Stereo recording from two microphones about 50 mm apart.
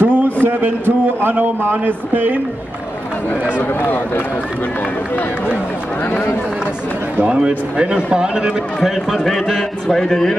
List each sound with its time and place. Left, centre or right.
0.0 s a man's voice: right
3.8 s speech: left
7.2 s a man's voice: centre
8.8 s a man's voice: centre